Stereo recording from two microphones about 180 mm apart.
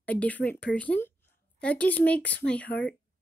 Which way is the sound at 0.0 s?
10° left (ahead or behind).